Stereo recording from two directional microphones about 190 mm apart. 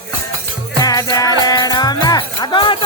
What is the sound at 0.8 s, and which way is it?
Music, 20° left (ahead or behind).